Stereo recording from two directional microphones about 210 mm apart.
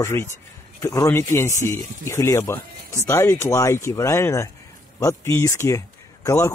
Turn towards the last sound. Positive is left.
turn(degrees=10)  # may be behind; listen again after turning